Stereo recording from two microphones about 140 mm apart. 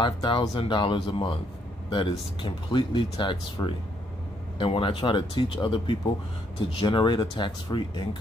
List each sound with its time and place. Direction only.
0.0 s speech: 35° left (ahead or behind)